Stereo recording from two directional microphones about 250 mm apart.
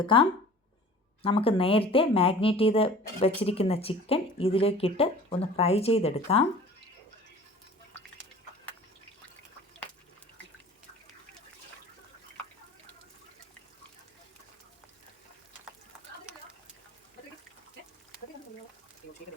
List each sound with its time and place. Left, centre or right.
0.0 s speech: left